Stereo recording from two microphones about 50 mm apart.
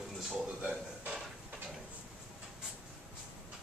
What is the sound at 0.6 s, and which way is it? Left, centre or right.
Music, right.